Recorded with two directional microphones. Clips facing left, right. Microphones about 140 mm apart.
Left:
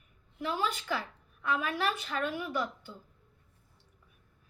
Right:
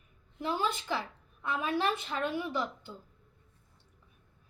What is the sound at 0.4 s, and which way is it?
A woman's voice, 25° right (ahead or behind).